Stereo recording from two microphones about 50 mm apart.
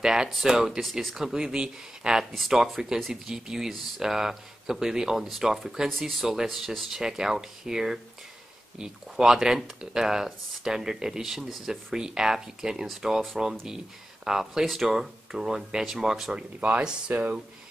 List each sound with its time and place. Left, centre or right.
0.0 s speech: centre
2.3 s speech: centre
12.8 s speech: centre
16.3 s speech: right